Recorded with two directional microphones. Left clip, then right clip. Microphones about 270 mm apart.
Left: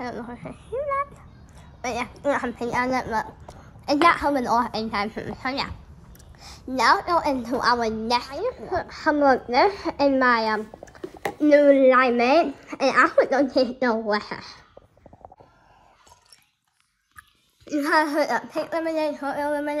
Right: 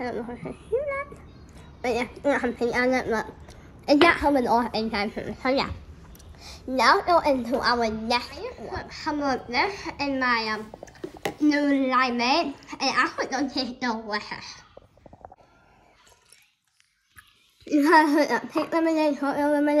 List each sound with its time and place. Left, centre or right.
0.3 s a woman's voice: centre
0.7 s speech: left
1.8 s a woman's voice: centre
8.5 s a woman's voice: centre
17.6 s a woman's voice: centre